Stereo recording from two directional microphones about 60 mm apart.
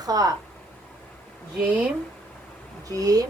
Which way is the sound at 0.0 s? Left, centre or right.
Right.